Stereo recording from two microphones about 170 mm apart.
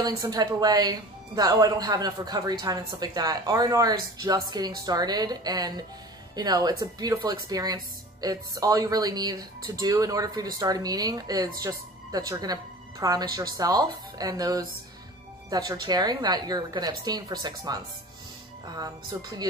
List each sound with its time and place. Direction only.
0.0 s speech: 25° right (ahead or behind)